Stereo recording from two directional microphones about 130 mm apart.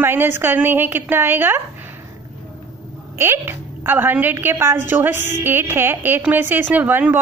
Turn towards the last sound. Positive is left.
turn(degrees=-15)  # may be behind; listen again after turning